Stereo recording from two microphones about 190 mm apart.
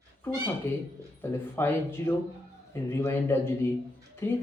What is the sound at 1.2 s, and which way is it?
Speech, 10° left (ahead or behind).